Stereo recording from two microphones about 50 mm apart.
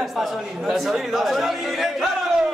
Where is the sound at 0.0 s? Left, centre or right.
Centre.